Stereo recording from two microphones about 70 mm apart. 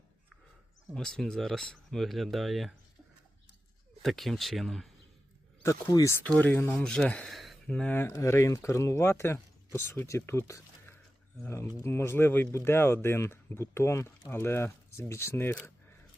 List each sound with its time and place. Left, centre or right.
0.9 s speech: centre
4.0 s speech: centre
6.4 s speech: left
6.8 s speech: centre
7.3 s a sound: centre
7.7 s speech: centre
7.9 s speech: left